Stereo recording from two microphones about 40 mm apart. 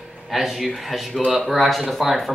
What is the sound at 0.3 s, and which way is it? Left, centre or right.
Speech, centre.